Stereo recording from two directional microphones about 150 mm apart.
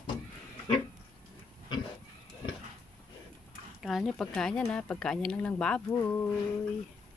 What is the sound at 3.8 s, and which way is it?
Speech, centre (ahead or behind).